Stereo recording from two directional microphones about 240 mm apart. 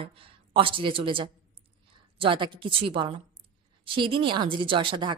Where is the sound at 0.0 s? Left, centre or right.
Right.